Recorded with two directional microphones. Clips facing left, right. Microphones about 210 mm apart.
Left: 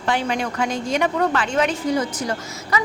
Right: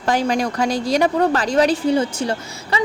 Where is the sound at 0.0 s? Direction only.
40° right (ahead or behind).